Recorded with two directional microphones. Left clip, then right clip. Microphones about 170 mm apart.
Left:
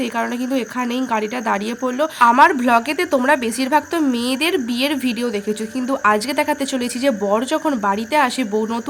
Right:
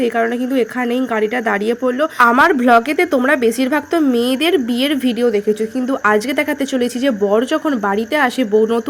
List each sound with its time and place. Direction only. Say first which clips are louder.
0.0 s a woman's voice: right 6 dB; 5° right (ahead or behind)